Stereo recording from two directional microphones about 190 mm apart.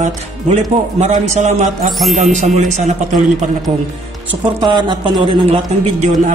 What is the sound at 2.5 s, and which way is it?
A man's voice, 40° right (ahead or behind).